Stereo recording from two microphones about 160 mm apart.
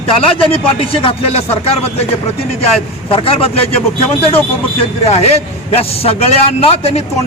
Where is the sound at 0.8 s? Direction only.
35° left (ahead or behind).